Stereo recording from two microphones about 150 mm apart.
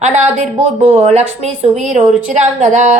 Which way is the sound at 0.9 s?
45° right (ahead or behind).